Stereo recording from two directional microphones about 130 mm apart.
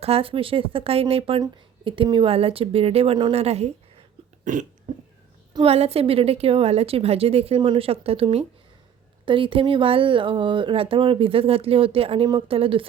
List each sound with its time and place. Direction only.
0.0 s speech: 50° right (ahead or behind)
3.3 s speech: 55° right (ahead or behind)
4.5 s burping: 70° right (ahead or behind)
5.6 s speech: 50° right (ahead or behind)